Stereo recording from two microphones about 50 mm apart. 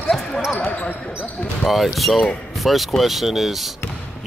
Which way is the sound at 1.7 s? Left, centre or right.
Centre.